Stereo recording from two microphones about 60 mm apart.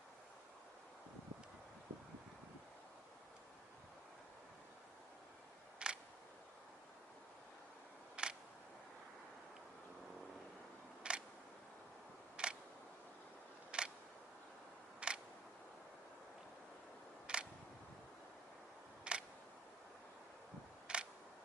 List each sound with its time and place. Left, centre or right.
5.8 s single-lens reflex camera: centre
8.1 s a sound: centre
11.1 s a sound: centre
12.4 s single-lens reflex camera: centre
13.7 s single-lens reflex camera: centre
15.0 s a sound: centre
17.3 s single-lens reflex camera: centre
19.1 s single-lens reflex camera: centre
20.8 s camera: centre